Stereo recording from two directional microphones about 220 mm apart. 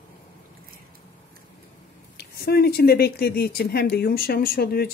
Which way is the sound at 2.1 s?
45° left (ahead or behind).